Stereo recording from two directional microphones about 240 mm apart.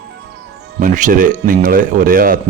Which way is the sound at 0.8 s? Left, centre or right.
Right.